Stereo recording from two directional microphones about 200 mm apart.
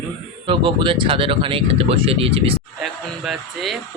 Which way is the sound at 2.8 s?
Centre (ahead or behind).